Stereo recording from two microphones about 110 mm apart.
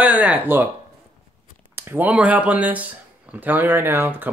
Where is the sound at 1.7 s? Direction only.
20° right (ahead or behind).